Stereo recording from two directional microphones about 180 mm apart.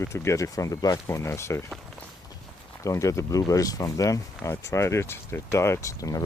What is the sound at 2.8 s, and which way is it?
Speech, 15° left (ahead or behind).